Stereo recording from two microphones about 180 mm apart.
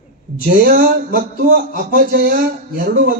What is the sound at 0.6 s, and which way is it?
Speech, 55° right (ahead or behind).